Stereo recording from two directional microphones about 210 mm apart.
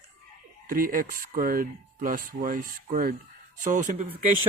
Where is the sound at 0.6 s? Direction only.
40° right (ahead or behind).